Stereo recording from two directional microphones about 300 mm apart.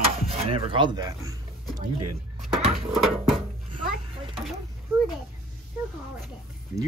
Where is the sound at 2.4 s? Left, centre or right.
Centre.